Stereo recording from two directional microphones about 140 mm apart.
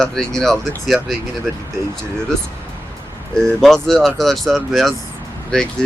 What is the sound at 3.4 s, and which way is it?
Speech, 5° left (ahead or behind).